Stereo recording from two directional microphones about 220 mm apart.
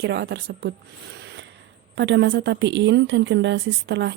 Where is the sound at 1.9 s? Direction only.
55° right (ahead or behind).